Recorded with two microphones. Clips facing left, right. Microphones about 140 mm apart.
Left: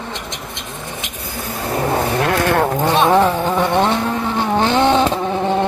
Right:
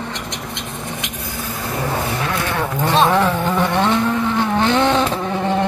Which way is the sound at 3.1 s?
20° left (ahead or behind).